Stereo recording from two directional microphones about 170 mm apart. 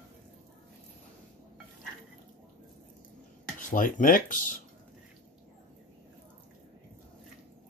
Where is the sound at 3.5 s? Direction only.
50° left (ahead or behind).